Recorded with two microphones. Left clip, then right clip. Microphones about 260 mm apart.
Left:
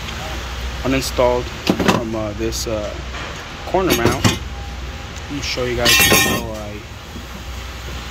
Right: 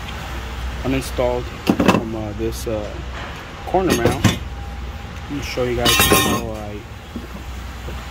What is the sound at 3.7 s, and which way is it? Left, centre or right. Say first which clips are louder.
Speech: left 1 dB; centre.